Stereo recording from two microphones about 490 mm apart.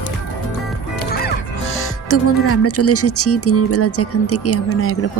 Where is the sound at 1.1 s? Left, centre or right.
Left.